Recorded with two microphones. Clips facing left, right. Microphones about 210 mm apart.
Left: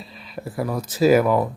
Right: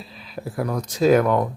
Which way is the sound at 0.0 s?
Centre (ahead or behind).